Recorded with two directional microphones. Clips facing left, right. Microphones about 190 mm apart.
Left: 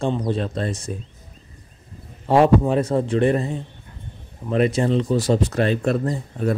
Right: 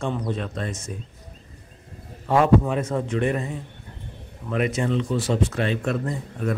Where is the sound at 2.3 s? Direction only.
35° left (ahead or behind).